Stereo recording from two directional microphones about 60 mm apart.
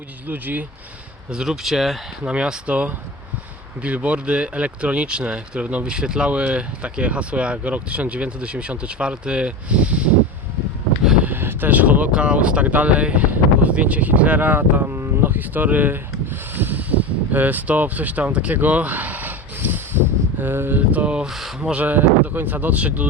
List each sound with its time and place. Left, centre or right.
0.3 s speech: right
1.3 s speech: centre
2.2 s speech: centre
11.2 s speech: right
14.9 s a sound: right
15.3 s speech: right
16.6 s a sound: right
18.5 s speech: right
19.5 s a sound: right
20.4 s speech: right
21.2 s speech: centre
21.6 s speech: right